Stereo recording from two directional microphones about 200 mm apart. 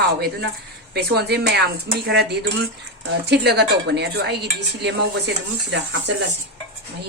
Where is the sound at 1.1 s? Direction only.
55° right (ahead or behind).